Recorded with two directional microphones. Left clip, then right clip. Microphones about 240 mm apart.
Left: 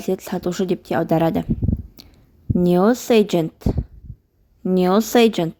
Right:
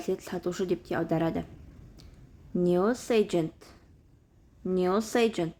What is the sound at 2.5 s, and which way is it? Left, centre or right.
A woman's voice, left.